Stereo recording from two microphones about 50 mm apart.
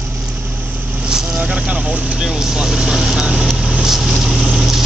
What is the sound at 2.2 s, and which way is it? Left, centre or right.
Vehicle, centre.